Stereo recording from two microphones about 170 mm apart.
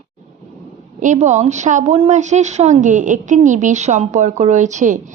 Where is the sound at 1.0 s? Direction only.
45° right (ahead or behind).